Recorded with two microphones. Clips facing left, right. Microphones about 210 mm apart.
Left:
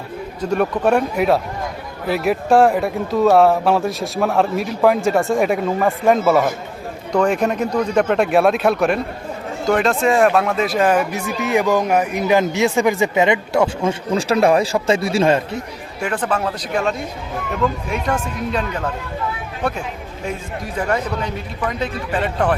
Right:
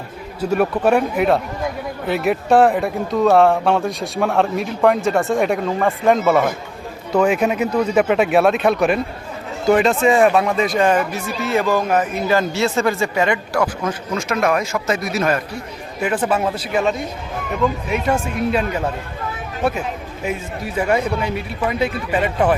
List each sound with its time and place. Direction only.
0.5 s speech: 5° right (ahead or behind); by 15.4 s 30° left (ahead or behind)
16.0 s speech: 5° right (ahead or behind)